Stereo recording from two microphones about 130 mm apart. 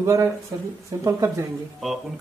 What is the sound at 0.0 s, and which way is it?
Speech, 20° right (ahead or behind).